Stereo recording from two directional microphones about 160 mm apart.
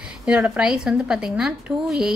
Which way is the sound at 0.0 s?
5° right (ahead or behind).